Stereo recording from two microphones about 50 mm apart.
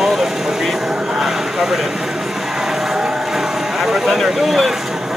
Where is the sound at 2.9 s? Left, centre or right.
Centre.